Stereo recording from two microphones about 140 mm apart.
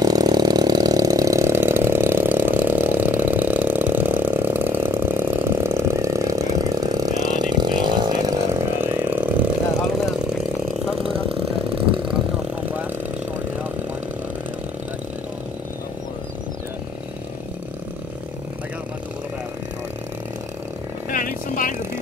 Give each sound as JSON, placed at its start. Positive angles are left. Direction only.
{"t": 0.0, "sound": "engine", "side_deg": -25}
{"t": 8.8, "sound": "vehicle", "side_deg": -15}
{"t": 11.0, "sound": "a sound", "side_deg": -40}
{"t": 21.1, "sound": "vehicle", "side_deg": 75}